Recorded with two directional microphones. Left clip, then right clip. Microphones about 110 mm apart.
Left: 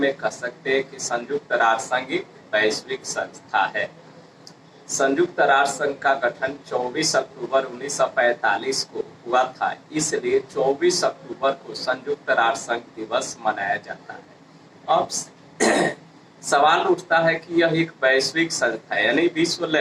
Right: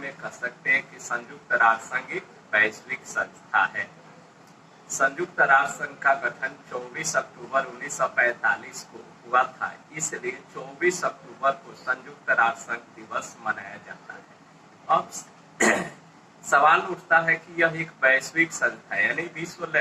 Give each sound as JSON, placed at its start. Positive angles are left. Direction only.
{"t": 0.0, "sound": "speech", "side_deg": 30}
{"t": 4.9, "sound": "speech", "side_deg": 25}
{"t": 15.6, "sound": "throat clearing", "side_deg": 35}
{"t": 16.5, "sound": "speech", "side_deg": 25}